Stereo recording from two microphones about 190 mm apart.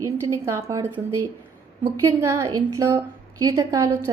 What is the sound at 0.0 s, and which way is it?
A woman's voice, 15° right (ahead or behind).